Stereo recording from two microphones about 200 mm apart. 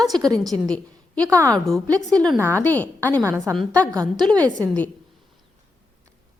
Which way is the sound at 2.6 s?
10° left (ahead or behind).